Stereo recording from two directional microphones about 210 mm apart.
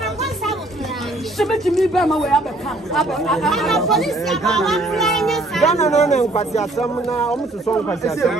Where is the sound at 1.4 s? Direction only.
Centre (ahead or behind).